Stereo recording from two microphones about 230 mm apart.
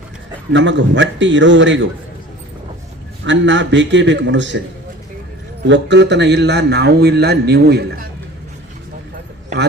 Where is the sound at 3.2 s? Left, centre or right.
Right.